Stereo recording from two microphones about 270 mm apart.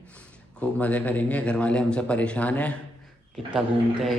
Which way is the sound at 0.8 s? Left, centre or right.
Centre.